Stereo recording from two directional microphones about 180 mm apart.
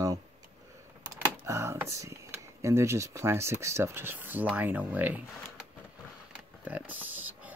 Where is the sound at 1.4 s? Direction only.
15° right (ahead or behind).